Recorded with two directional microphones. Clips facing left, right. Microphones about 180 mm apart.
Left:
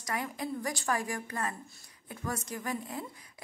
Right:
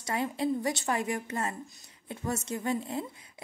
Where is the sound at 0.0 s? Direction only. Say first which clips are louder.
Right 5 dB; 25° right (ahead or behind).